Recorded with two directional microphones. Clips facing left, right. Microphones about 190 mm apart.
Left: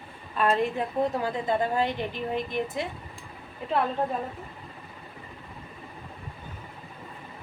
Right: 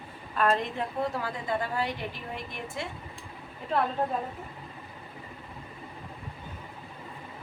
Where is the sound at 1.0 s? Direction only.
20° left (ahead or behind).